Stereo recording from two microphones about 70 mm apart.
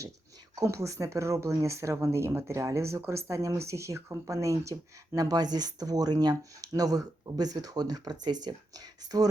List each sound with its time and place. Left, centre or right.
0.6 s speech: right